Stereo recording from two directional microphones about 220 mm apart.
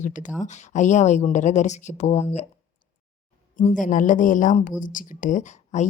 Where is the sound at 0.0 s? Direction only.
35° left (ahead or behind).